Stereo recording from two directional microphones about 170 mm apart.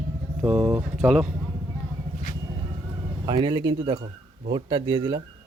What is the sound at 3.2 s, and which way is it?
Speech, 25° right (ahead or behind).